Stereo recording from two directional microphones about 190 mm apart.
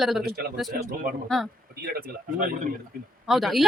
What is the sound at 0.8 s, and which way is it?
Speech, 45° right (ahead or behind).